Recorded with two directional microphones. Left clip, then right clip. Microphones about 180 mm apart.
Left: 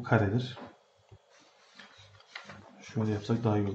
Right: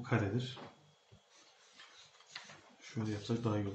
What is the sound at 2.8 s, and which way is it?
Speech, 45° left (ahead or behind).